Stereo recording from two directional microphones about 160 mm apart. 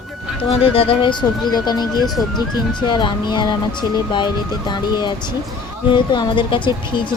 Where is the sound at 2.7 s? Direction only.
30° left (ahead or behind).